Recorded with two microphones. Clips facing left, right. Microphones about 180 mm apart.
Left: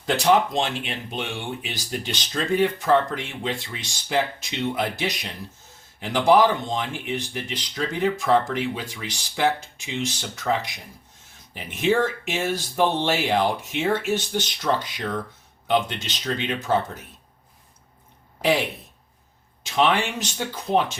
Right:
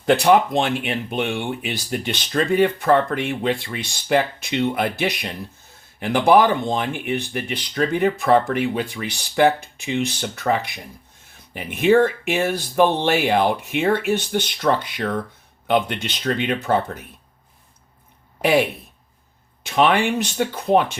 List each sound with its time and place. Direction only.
0.0 s speech: 60° right (ahead or behind)
19.6 s speech: 60° right (ahead or behind)